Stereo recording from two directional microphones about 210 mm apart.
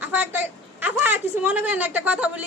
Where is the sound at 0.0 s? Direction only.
10° right (ahead or behind).